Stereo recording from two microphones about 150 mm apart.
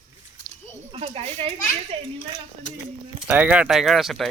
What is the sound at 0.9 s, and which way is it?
Speech, 40° right (ahead or behind).